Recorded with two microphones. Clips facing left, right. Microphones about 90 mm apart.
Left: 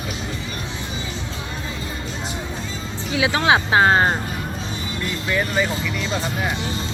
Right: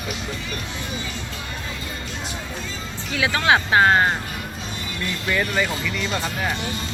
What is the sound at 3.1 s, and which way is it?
Speech, 20° left (ahead or behind).